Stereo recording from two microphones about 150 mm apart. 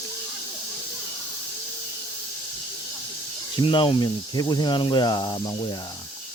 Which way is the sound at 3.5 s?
35° left (ahead or behind).